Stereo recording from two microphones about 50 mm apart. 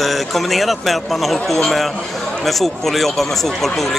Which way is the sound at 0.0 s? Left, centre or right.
Centre.